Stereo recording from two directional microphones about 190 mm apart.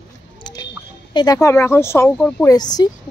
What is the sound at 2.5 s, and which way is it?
Speech, 20° left (ahead or behind).